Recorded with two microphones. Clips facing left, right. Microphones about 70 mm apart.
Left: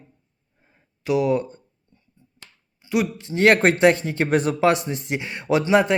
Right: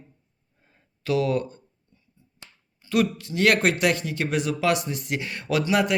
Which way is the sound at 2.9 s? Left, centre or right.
Left.